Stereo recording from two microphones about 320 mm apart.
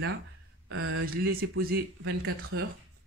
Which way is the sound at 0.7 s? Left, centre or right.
Right.